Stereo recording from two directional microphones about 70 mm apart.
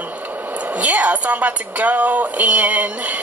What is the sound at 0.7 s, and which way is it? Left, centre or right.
Speech, right.